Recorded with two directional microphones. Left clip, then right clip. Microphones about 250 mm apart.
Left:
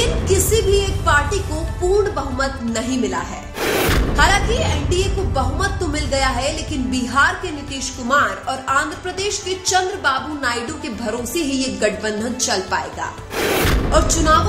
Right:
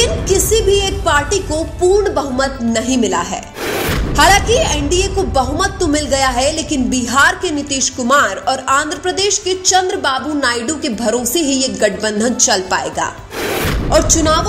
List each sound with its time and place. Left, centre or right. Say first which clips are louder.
0.0 s music: right 4 dB; right
2.1 s speech: right 5 dB; right
3.6 s music: left 1 dB; centre
4.2 s speech: right 7 dB; right
13.4 s a sound: even; centre
13.9 s speech: right 3 dB; right